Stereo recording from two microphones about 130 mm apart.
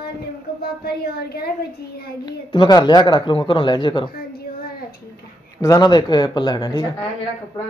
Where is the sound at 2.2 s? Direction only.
35° left (ahead or behind).